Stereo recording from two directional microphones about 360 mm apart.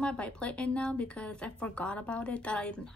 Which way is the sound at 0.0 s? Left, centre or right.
Centre.